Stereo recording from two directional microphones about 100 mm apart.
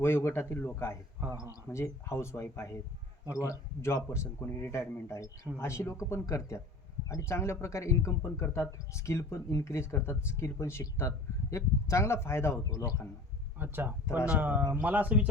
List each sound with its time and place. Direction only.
0.0 s a man's voice: 25° left (ahead or behind)
13.6 s speech: 20° right (ahead or behind)